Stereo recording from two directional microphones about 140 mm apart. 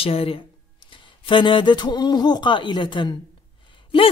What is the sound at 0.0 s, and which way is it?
A man's voice, 40° left (ahead or behind).